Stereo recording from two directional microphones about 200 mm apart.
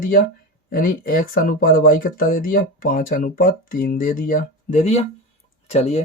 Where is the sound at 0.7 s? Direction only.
45° left (ahead or behind).